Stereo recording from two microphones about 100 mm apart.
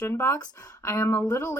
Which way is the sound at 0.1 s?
25° left (ahead or behind).